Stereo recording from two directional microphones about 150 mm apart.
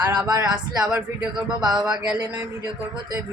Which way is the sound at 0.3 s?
25° right (ahead or behind).